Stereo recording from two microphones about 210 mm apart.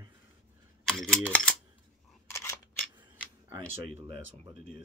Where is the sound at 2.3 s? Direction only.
10° left (ahead or behind).